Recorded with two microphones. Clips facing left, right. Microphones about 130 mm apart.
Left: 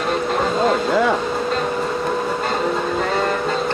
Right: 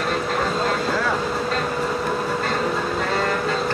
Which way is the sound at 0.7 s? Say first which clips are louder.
Left 5 dB; 20° left (ahead or behind).